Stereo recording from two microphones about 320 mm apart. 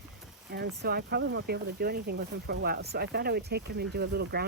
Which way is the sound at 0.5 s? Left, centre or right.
Right.